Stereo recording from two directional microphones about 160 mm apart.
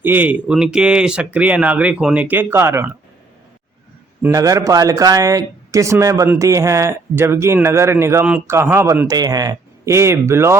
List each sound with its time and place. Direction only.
0.0 s speech: 10° right (ahead or behind)
4.2 s speech: 20° right (ahead or behind)